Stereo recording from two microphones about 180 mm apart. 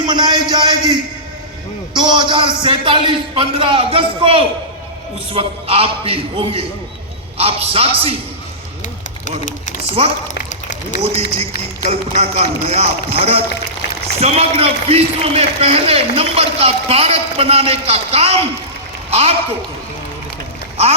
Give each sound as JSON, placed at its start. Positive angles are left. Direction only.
{"t": 0.0, "sound": "a man's voice", "side_deg": -25}
{"t": 2.0, "sound": "a man's voice", "side_deg": -25}
{"t": 9.5, "sound": "speech", "side_deg": 45}
{"t": 10.5, "sound": "run", "side_deg": 45}
{"t": 11.0, "sound": "a man's voice", "side_deg": -35}